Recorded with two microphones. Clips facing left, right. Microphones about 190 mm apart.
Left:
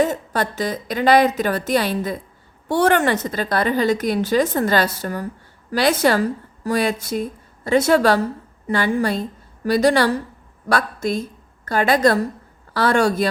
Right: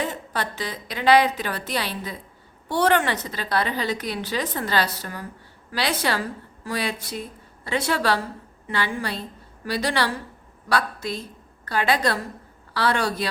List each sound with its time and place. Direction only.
0.0 s a woman's voice: 45° left (ahead or behind)